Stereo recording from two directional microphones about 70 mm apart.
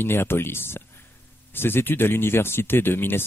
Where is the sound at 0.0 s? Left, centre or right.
Left.